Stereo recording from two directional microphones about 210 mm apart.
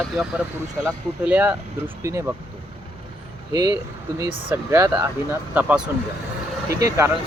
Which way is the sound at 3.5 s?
15° right (ahead or behind).